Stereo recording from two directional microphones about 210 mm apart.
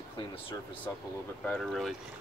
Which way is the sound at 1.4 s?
Centre (ahead or behind).